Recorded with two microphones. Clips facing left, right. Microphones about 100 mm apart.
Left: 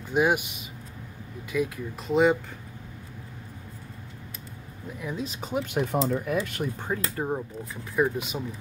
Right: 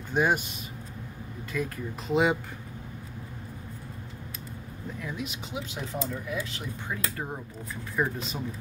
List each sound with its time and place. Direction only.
0.1 s speech: 5° left (ahead or behind)
1.5 s speech: 5° left (ahead or behind)
5.2 s speech: 40° left (ahead or behind)
5.8 s speech: 70° left (ahead or behind); by 6.9 s 55° left (ahead or behind)
6.9 s speech: 30° left (ahead or behind)
7.9 s speech: 10° left (ahead or behind)